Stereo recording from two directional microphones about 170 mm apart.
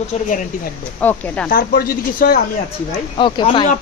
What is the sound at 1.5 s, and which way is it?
Speech, 60° left (ahead or behind).